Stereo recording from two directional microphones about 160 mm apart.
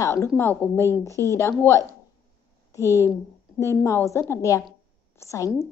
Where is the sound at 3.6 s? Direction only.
15° left (ahead or behind).